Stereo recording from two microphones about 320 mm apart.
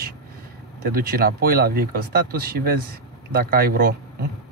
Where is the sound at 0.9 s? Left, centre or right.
Right.